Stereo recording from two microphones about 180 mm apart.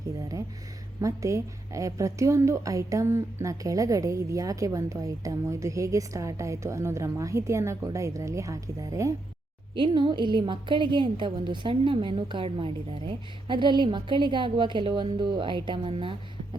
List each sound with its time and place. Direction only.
1.0 s a woman's voice: 15° right (ahead or behind)